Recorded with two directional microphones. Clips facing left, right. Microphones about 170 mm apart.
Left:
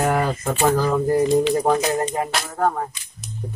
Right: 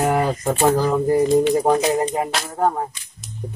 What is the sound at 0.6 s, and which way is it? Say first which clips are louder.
Speech: right 1 dB; 20° right (ahead or behind).